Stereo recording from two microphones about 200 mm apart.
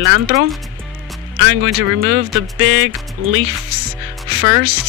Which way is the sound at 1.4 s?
85° right.